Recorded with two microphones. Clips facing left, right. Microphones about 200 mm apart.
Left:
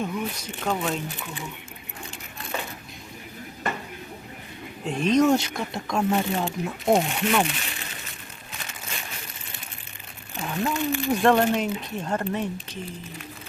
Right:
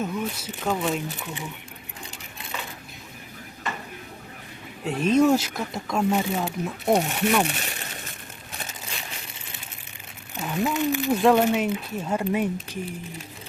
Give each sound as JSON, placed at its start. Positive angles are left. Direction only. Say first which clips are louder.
{"t": 0.0, "sound": "speech", "louder": "right 1 dB", "side_deg": -5}
{"t": 4.9, "sound": "speech", "louder": "right 1 dB", "side_deg": -5}
{"t": 7.4, "sound": "speech", "louder": "right 2 dB", "side_deg": -45}
{"t": 10.3, "sound": "speech", "louder": "right 2 dB", "side_deg": -5}